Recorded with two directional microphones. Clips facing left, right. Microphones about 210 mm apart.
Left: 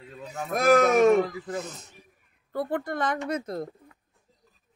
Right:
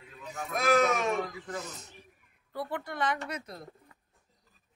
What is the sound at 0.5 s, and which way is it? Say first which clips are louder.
Speech: left 6 dB; 50° left (ahead or behind).